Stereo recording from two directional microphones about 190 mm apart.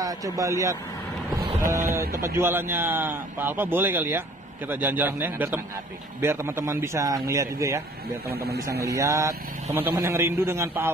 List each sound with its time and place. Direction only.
0.0 s a man's voice: 20° right (ahead or behind)
2.0 s a man's voice: 15° right (ahead or behind)
8.8 s a man's voice: 15° right (ahead or behind)